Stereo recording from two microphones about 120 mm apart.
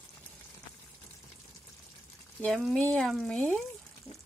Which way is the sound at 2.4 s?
5° left (ahead or behind).